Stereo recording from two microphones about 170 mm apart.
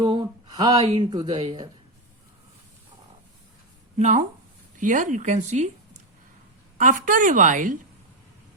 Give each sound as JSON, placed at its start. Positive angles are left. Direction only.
{"t": 0.0, "sound": "speech", "side_deg": -25}
{"t": 3.9, "sound": "a woman's voice", "side_deg": -45}
{"t": 6.7, "sound": "a woman's voice", "side_deg": -50}